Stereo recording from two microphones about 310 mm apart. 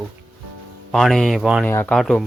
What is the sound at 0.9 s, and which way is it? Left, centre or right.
Speech, centre.